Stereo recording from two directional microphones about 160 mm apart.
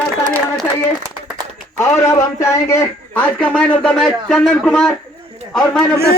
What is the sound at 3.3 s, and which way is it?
Speech, 5° left (ahead or behind).